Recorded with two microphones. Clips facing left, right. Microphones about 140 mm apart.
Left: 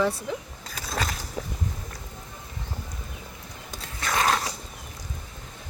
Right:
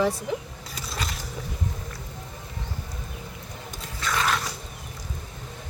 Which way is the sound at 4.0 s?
40° left (ahead or behind).